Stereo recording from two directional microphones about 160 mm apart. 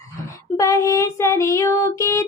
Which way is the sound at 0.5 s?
20° left (ahead or behind).